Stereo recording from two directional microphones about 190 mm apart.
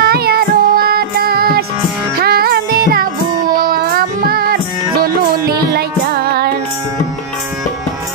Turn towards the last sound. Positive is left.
turn(degrees=-55)  # may be behind; listen again after turning